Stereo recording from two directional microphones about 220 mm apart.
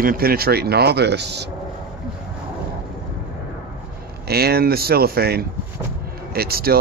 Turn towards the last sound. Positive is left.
turn(degrees=-45)  # may be behind; listen again after turning